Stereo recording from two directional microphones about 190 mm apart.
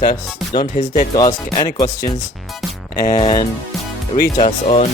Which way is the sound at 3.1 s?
25° left (ahead or behind).